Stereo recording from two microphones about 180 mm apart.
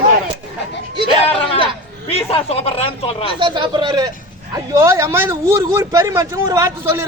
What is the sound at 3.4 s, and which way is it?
A man's voice, 25° right (ahead or behind).